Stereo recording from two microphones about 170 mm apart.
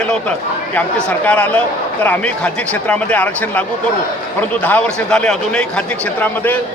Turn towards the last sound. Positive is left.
turn(degrees=5)  # may be behind; listen again after turning